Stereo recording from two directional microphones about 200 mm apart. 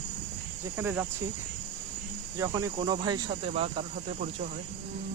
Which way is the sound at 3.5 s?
30° right (ahead or behind).